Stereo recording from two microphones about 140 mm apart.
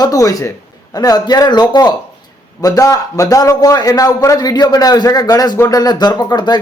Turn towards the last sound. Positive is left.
turn(degrees=30)  # may be behind; listen again after turning